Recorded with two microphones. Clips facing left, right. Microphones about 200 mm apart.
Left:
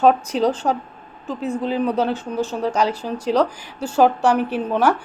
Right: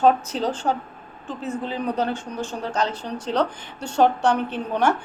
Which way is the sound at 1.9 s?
10° left (ahead or behind).